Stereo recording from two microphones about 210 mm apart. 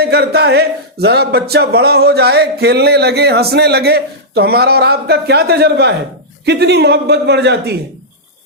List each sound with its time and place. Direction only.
0.0 s speech: 50° right (ahead or behind)